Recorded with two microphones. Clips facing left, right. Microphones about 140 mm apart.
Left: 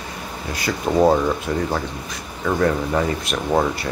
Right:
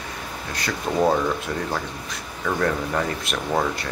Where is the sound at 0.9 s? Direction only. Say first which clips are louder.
Left 5 dB; 15° left (ahead or behind).